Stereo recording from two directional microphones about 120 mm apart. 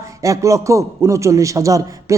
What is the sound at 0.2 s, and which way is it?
Speech, 25° right (ahead or behind).